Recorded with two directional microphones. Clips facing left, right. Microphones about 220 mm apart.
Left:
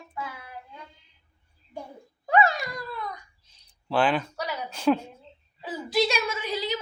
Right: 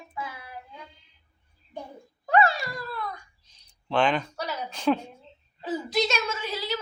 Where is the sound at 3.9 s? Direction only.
5° left (ahead or behind).